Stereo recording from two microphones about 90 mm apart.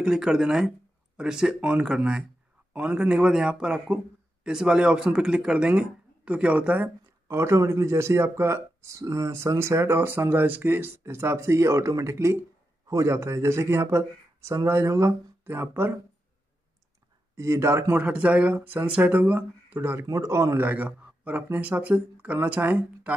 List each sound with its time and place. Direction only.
0.0 s a man's voice: 5° right (ahead or behind)
7.2 s speech: 30° right (ahead or behind)
17.4 s speech: 30° right (ahead or behind)
17.9 s a man's voice: 15° right (ahead or behind)
19.8 s speech: 30° right (ahead or behind)
20.6 s a man's voice: 20° right (ahead or behind)